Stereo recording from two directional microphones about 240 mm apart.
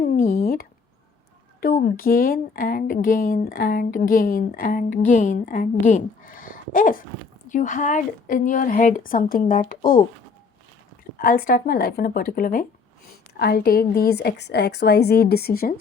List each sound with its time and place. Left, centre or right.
0.0 s a sound: left
1.6 s speech: left
11.2 s a woman's voice: left